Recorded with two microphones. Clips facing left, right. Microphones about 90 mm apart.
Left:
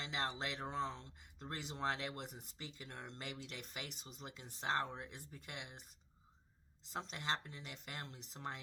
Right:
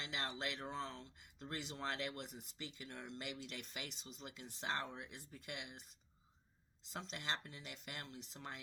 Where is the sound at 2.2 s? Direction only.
45° left (ahead or behind).